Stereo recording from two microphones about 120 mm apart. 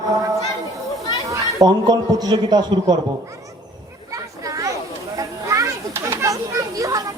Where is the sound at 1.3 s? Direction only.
35° right (ahead or behind).